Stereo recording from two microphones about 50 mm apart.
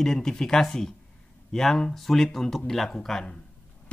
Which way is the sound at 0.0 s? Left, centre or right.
Centre.